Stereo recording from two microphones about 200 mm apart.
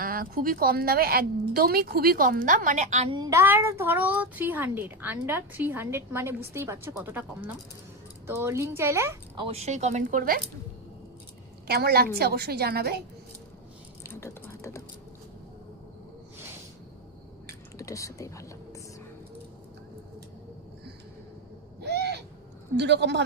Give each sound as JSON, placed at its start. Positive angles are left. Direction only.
{"t": 0.0, "sound": "speech", "side_deg": -45}
{"t": 3.2, "sound": "a child's voice", "side_deg": -15}
{"t": 9.3, "sound": "speech", "side_deg": -25}
{"t": 11.7, "sound": "speech", "side_deg": -50}
{"t": 14.0, "sound": "a sound", "side_deg": 15}
{"t": 17.7, "sound": "whispering", "side_deg": 15}
{"t": 21.8, "sound": "owl", "side_deg": -55}
{"t": 22.7, "sound": "a man's voice", "side_deg": -60}